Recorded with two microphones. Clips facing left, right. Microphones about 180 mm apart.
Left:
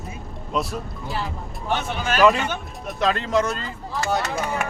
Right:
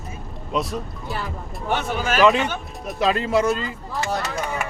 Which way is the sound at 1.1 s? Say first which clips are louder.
Left 2 dB; 50° right (ahead or behind).